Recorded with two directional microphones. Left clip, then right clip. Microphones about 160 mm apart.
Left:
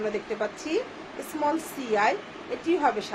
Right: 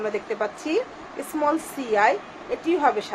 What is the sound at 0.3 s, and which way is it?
A woman's voice, 65° right (ahead or behind).